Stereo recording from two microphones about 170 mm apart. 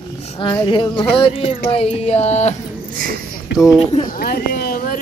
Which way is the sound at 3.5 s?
5° right (ahead or behind).